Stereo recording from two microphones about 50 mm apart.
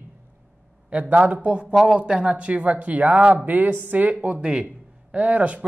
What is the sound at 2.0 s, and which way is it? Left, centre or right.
Speech, right.